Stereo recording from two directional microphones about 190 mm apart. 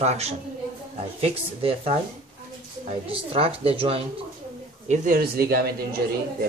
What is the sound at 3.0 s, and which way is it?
A woman's voice, 30° right (ahead or behind).